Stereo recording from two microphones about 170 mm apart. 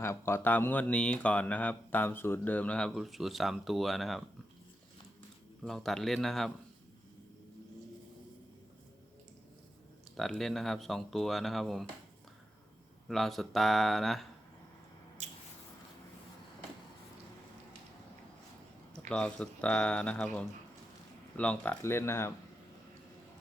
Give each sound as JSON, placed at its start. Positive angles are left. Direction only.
{"t": 0.0, "sound": "speech", "side_deg": 15}
{"t": 5.6, "sound": "speech", "side_deg": 0}
{"t": 10.2, "sound": "speech", "side_deg": 0}
{"t": 13.1, "sound": "speech", "side_deg": 0}
{"t": 15.2, "sound": "squish", "side_deg": -40}
{"t": 19.0, "sound": "speech", "side_deg": 5}